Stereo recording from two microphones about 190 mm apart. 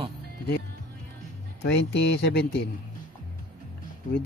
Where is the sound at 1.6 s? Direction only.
65° left (ahead or behind).